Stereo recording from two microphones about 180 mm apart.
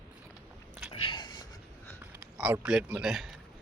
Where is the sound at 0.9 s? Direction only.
25° left (ahead or behind).